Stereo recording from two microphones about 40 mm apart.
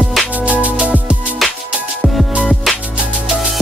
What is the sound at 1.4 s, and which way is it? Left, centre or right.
Music, centre.